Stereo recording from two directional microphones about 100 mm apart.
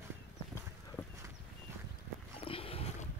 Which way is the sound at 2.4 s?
70° left (ahead or behind).